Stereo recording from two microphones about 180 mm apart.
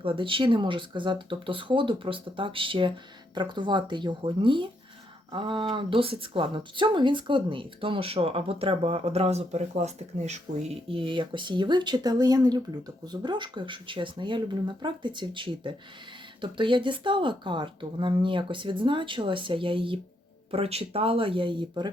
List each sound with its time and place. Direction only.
0.0 s speech: 30° right (ahead or behind)